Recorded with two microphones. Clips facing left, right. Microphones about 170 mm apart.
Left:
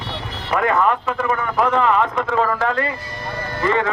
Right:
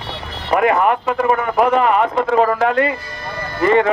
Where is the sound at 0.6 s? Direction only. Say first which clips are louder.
Right 3 dB; 15° right (ahead or behind).